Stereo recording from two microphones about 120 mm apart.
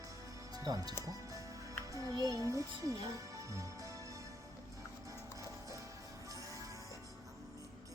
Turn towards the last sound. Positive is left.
turn(degrees=-25)  # may be behind; listen again after turning